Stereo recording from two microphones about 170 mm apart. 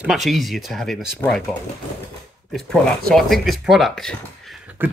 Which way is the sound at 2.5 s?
Centre (ahead or behind).